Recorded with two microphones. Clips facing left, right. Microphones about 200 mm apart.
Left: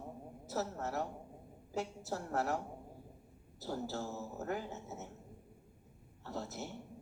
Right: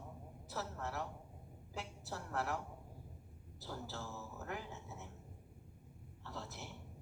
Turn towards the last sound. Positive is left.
turn(degrees=40)  # may be behind; listen again after turning